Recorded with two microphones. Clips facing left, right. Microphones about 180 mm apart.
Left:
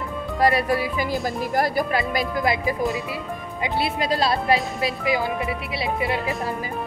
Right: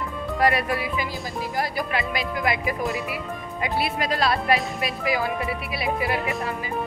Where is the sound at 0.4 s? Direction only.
35° left (ahead or behind).